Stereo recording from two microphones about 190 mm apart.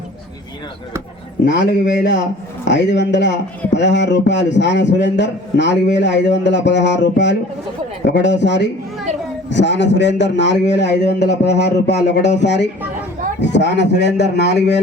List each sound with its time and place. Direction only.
1.5 s a man's voice: 65° left (ahead or behind)